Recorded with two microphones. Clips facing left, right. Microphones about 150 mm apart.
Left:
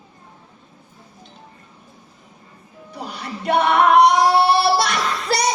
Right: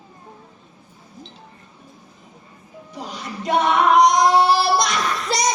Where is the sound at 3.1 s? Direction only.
60° left (ahead or behind).